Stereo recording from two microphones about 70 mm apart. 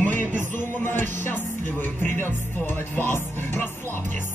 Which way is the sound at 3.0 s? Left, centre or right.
Left.